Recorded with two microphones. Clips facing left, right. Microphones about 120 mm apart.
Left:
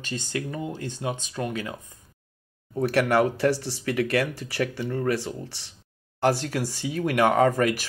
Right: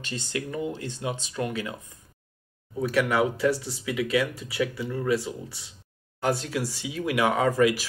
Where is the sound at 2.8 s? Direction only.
65° left (ahead or behind).